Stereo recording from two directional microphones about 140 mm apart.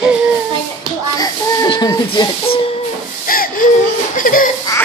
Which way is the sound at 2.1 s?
40° left (ahead or behind).